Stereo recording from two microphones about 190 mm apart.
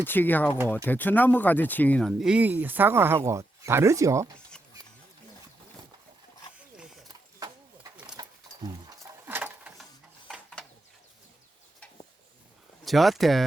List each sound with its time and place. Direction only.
0.0 s speech: 10° left (ahead or behind); by 4.3 s 15° right (ahead or behind)
7.3 s horse: 20° right (ahead or behind)
8.1 s roaring cats: 20° right (ahead or behind)
9.2 s a sound: 10° right (ahead or behind)
12.8 s speech: centre (ahead or behind)